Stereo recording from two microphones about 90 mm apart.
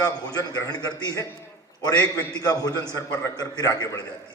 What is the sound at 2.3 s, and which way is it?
A man's voice, 45° left (ahead or behind).